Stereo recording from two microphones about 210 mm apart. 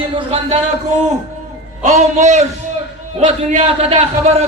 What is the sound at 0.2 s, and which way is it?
Speech, 25° right (ahead or behind).